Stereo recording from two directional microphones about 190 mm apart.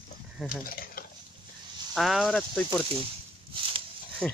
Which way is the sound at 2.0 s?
Centre (ahead or behind).